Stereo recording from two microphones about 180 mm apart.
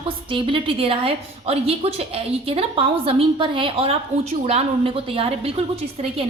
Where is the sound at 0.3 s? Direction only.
30° right (ahead or behind).